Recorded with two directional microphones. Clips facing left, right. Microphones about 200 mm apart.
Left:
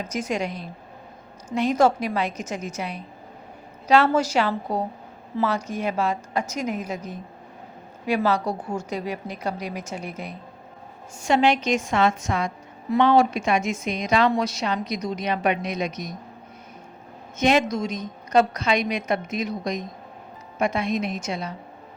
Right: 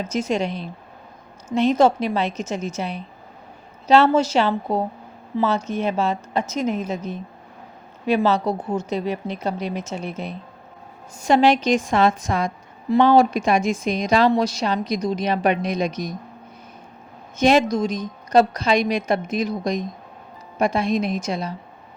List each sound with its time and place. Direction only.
0.0 s a woman's voice: 25° right (ahead or behind)
11.2 s a woman's voice: 35° right (ahead or behind)
17.3 s a woman's voice: 35° right (ahead or behind)